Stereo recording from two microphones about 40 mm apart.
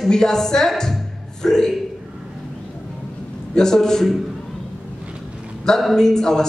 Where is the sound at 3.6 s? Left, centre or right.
Centre.